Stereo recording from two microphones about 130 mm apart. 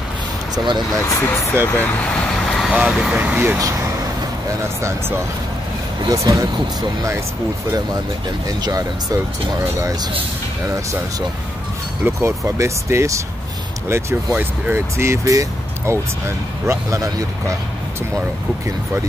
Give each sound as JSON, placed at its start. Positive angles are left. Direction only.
{"t": 1.0, "sound": "speech", "side_deg": 20}
{"t": 2.4, "sound": "vehicle", "side_deg": 0}
{"t": 2.7, "sound": "speech", "side_deg": -5}
{"t": 3.2, "sound": "speech", "side_deg": -15}
{"t": 6.0, "sound": "speech", "side_deg": -25}
{"t": 8.5, "sound": "speech", "side_deg": -30}
{"t": 12.0, "sound": "speech", "side_deg": -20}